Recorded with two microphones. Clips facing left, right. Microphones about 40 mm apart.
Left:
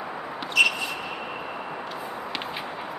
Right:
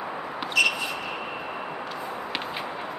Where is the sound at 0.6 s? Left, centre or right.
Left.